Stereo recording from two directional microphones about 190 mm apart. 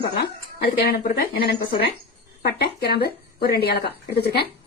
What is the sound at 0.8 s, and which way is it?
Speech, 55° left (ahead or behind).